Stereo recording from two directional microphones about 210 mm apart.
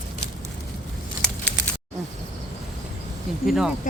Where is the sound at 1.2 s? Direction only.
5° left (ahead or behind).